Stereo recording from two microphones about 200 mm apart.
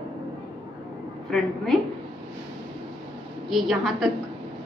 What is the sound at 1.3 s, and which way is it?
Speech, centre (ahead or behind).